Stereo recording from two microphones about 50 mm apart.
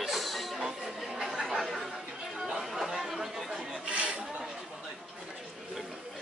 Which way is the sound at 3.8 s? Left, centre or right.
Right.